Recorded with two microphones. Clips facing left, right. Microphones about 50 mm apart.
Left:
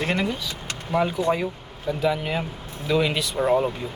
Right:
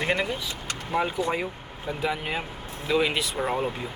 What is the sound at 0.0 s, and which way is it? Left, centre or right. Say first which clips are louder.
Speech: left 1 dB; centre.